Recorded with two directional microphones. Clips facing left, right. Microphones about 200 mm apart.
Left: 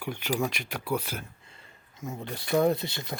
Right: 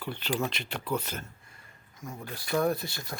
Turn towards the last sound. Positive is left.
turn(degrees=20)  # may be behind; listen again after turning